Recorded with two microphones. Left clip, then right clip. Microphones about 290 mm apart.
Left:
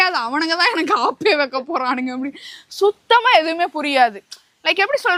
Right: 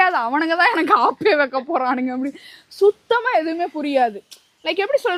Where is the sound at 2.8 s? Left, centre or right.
Left.